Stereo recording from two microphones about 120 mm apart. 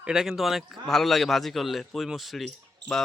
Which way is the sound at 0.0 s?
5° right (ahead or behind).